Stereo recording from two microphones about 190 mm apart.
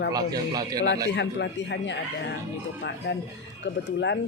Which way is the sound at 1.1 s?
65° left (ahead or behind).